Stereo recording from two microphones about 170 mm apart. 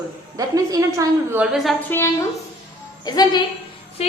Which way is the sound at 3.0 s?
25° left (ahead or behind).